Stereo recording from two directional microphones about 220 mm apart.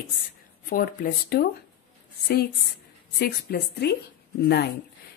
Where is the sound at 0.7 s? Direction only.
40° left (ahead or behind).